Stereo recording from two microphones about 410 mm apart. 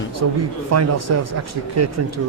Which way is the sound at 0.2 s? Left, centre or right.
Right.